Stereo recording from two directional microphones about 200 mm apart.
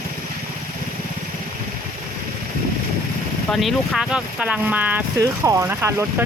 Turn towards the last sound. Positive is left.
turn(degrees=-15)  # may be behind; listen again after turning